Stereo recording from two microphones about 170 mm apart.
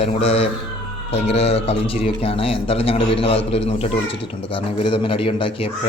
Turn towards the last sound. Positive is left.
turn(degrees=30)  # may be behind; listen again after turning